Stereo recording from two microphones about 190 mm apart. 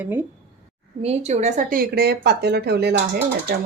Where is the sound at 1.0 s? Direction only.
35° right (ahead or behind).